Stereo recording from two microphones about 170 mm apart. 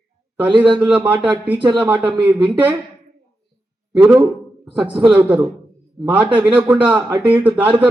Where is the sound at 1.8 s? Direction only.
10° right (ahead or behind).